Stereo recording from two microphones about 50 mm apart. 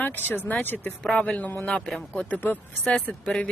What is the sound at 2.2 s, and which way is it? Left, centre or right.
Speech, left.